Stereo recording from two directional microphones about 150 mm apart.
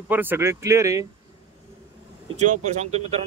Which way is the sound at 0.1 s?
15° right (ahead or behind).